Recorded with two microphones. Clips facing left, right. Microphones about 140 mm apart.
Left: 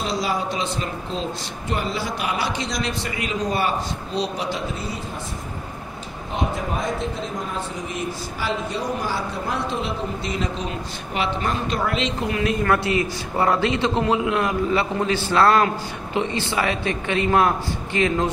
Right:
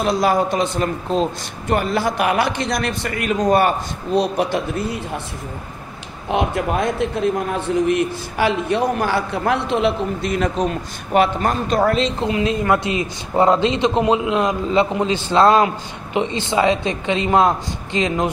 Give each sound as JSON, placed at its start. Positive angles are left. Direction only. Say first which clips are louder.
{"t": 0.0, "sound": "a woman's voice", "louder": "right 7 dB", "side_deg": -55}
{"t": 6.3, "sound": "a man's voice", "louder": "right 6 dB", "side_deg": -70}
{"t": 12.2, "sound": "a man's voice", "louder": "right 3 dB", "side_deg": -20}